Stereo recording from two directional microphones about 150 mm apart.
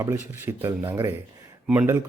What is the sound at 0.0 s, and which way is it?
Speech, 15° right (ahead or behind).